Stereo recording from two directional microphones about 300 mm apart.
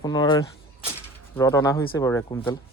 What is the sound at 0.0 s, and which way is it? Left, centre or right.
Speech, centre.